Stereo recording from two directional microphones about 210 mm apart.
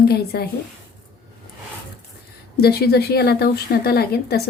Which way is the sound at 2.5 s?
50° left (ahead or behind).